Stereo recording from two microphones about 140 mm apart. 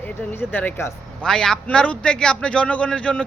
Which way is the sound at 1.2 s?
5° left (ahead or behind).